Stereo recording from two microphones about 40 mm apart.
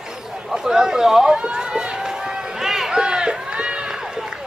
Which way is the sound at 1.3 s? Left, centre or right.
Right.